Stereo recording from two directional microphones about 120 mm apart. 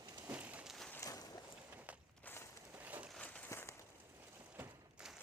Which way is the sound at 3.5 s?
25° left (ahead or behind).